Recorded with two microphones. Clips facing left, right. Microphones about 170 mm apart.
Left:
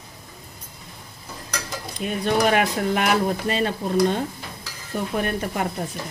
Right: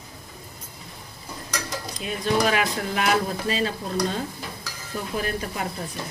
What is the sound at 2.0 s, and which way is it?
Speech, 50° left (ahead or behind).